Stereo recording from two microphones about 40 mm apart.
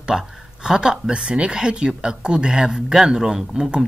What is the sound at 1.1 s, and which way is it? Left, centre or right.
Speech, right.